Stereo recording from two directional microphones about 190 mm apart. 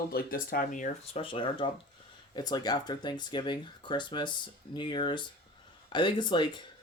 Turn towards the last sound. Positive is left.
turn(degrees=25)  # may be behind; listen again after turning